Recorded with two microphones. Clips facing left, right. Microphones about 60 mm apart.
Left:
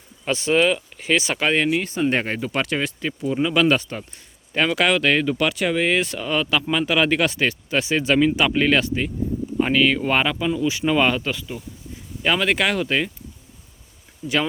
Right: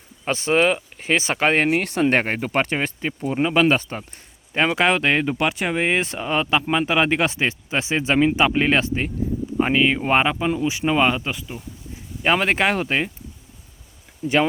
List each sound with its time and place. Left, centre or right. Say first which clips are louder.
0.3 s speech: even; right
1.8 s speech: right 2 dB; right
2.2 s speech: right 2 dB; right; by 11.6 s centre
12.2 s speech: right 1 dB; right
14.2 s speech: right 3 dB; right